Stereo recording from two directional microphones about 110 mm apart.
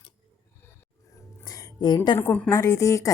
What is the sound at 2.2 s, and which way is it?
Speech, 15° left (ahead or behind).